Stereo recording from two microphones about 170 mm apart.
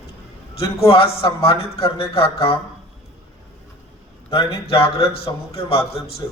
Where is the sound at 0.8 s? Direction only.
35° left (ahead or behind).